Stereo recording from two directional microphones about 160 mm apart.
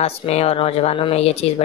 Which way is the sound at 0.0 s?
40° left (ahead or behind).